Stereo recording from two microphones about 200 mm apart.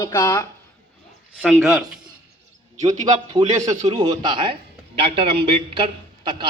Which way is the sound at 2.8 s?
35° right (ahead or behind).